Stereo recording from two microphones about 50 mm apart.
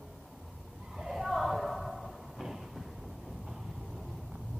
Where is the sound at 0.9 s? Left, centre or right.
Centre.